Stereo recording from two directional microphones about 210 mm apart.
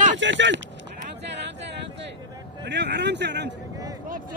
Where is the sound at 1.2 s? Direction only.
55° right (ahead or behind).